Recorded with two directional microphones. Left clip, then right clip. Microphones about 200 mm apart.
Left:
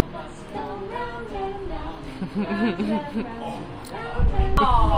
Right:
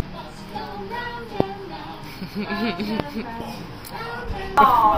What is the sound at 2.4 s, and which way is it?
Speech, 25° left (ahead or behind).